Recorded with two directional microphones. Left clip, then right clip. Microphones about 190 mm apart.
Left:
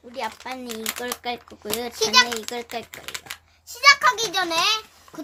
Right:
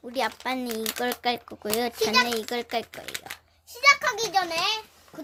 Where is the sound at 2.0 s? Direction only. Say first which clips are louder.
Left 5 dB; 15° left (ahead or behind).